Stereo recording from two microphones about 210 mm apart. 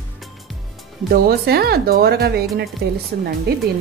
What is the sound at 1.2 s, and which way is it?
Speech, 45° right (ahead or behind).